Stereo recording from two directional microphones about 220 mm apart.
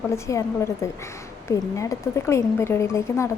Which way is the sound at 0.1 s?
15° left (ahead or behind).